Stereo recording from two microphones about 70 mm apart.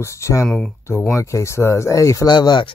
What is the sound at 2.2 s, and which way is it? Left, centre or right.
Speech, left.